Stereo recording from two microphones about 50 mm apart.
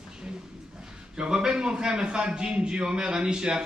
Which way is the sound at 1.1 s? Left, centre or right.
Centre.